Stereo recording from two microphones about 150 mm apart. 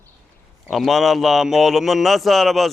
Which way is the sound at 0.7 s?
Centre (ahead or behind).